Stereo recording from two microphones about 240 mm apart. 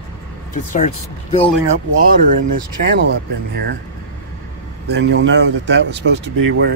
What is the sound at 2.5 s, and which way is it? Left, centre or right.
Speech, right.